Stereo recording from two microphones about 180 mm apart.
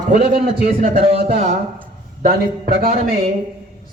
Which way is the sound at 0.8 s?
40° right (ahead or behind).